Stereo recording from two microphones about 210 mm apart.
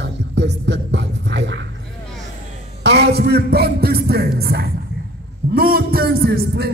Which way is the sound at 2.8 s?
55° right (ahead or behind).